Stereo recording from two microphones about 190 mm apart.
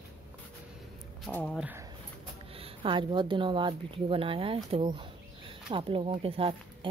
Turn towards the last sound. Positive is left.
turn(degrees=-30)  # may be behind; listen again after turning